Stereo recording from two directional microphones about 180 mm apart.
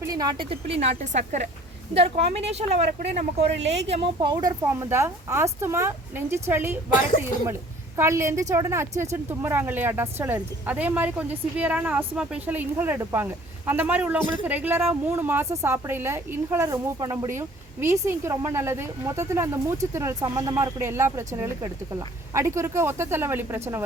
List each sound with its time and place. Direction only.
0.0 s a woman's voice: 20° right (ahead or behind); by 3.7 s 35° right (ahead or behind)
4.2 s speech: 25° right (ahead or behind)
4.6 s a woman's voice: 15° right (ahead or behind)
7.9 s a woman's voice: 15° right (ahead or behind)